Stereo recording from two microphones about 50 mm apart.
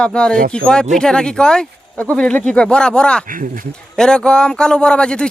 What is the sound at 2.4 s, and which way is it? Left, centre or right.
A man's voice, left.